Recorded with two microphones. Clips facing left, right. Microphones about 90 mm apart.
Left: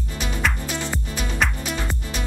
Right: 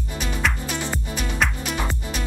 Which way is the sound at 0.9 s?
Centre (ahead or behind).